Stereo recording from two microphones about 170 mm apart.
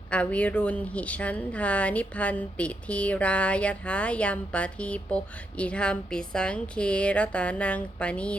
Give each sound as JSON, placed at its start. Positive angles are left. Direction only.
{"t": 0.1, "sound": "a woman's voice", "side_deg": 5}